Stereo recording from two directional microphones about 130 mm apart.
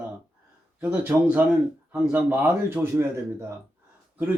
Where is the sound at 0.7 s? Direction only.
10° right (ahead or behind).